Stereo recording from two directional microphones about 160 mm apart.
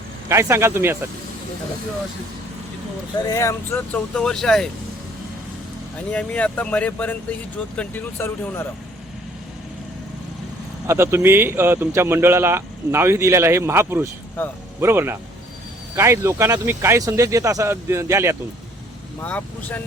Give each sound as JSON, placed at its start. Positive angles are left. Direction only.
{"t": 0.3, "sound": "a man's voice", "side_deg": -15}
{"t": 3.2, "sound": "speech", "side_deg": 20}
{"t": 6.1, "sound": "speech", "side_deg": 10}
{"t": 10.8, "sound": "a man's voice", "side_deg": -15}
{"t": 19.2, "sound": "speech", "side_deg": 10}